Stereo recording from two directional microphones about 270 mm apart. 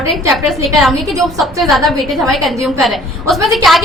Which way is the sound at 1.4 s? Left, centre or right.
Centre.